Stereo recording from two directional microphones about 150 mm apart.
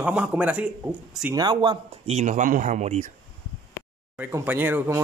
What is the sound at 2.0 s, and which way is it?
Speech, 50° right (ahead or behind).